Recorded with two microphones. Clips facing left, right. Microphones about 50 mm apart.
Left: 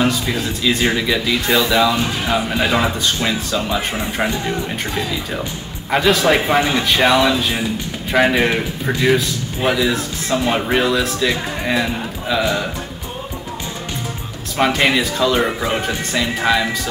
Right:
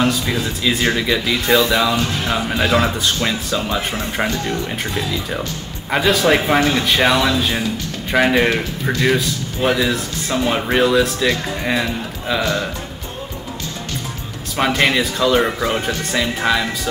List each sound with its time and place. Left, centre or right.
0.0 s speech: centre
4.3 s speech: centre
4.6 s speech: centre
14.6 s speech: centre